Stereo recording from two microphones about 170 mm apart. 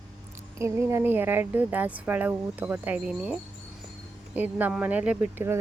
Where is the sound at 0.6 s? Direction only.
15° right (ahead or behind).